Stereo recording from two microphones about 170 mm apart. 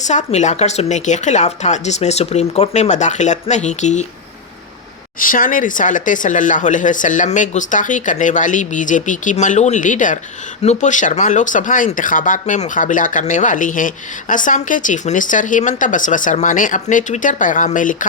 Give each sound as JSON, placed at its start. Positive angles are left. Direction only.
{"t": 0.0, "sound": "speech", "side_deg": 45}
{"t": 5.2, "sound": "speech", "side_deg": 55}